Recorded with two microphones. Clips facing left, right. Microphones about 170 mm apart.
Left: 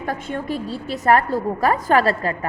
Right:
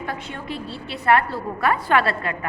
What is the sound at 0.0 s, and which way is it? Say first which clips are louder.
A woman's voice: left 5 dB; 45° left (ahead or behind).